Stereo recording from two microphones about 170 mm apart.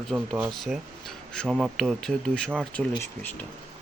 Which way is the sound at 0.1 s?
15° right (ahead or behind).